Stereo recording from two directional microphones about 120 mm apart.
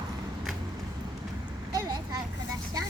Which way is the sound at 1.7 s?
30° right (ahead or behind).